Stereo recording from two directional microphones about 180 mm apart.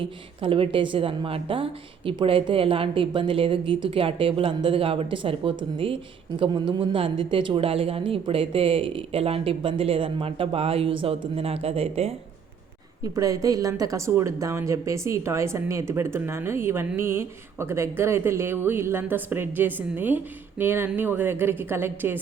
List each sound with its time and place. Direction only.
0.0 s a woman's voice: 30° right (ahead or behind)
13.0 s a woman's voice: 20° right (ahead or behind)